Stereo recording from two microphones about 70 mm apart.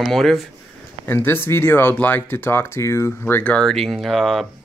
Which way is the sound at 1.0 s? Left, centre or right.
Left.